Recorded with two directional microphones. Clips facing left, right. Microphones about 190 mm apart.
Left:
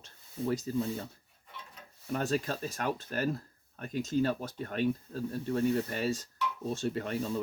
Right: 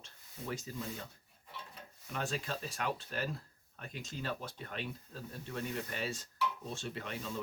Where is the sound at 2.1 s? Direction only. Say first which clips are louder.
Left 7 dB; 40° left (ahead or behind).